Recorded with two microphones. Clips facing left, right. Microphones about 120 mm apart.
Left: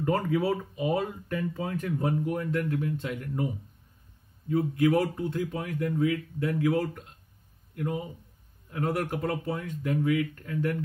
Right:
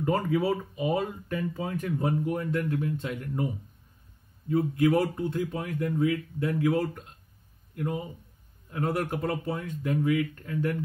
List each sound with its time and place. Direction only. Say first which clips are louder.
0.0 s speech: even; 15° right (ahead or behind)
4.5 s speech: even; 30° right (ahead or behind)
8.7 s speech: even; 25° right (ahead or behind)